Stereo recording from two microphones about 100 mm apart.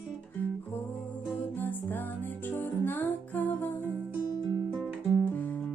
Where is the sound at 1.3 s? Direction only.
20° left (ahead or behind).